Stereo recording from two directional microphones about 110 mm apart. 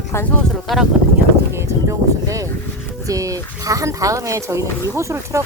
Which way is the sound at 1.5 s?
25° right (ahead or behind).